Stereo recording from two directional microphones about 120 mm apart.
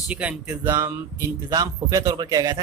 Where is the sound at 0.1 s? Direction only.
10° right (ahead or behind).